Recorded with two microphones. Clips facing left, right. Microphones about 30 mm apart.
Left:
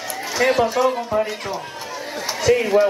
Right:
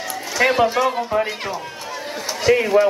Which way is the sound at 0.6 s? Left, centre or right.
Centre.